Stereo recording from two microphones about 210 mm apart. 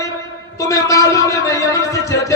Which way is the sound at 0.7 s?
15° left (ahead or behind).